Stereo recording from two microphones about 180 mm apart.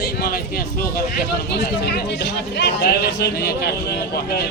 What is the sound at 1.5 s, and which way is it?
Speech, 70° left (ahead or behind).